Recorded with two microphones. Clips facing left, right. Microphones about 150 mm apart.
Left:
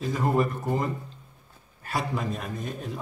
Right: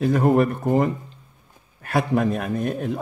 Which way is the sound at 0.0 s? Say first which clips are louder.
Right 7 dB; 60° right (ahead or behind).